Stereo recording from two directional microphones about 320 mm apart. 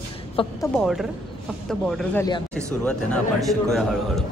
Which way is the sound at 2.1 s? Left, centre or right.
Centre.